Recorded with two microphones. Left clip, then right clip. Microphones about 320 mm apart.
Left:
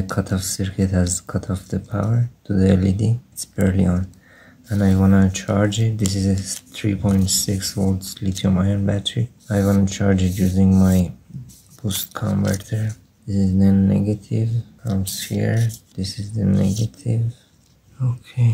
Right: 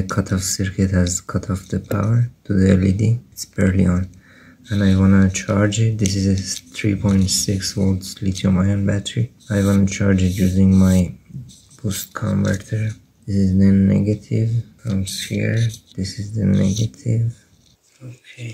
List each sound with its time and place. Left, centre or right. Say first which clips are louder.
0.1 s speech: right 2 dB; centre
13.6 s speech: right 1 dB; centre
15.2 s speech: even; centre
15.5 s speech: right 1 dB; left
16.0 s speech: right 1 dB; centre
16.6 s speech: right 2 dB; centre